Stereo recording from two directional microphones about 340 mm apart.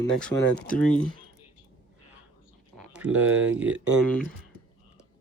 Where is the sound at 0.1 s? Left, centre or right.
Centre.